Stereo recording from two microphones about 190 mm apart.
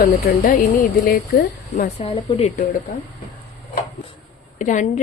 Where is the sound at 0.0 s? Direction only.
50° left (ahead or behind).